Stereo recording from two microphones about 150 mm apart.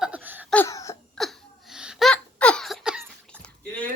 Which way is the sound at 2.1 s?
5° left (ahead or behind).